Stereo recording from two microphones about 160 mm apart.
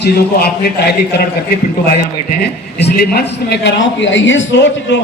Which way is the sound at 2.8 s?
90° left.